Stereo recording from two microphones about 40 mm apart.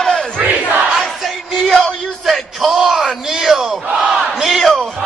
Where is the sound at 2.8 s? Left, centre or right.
Centre.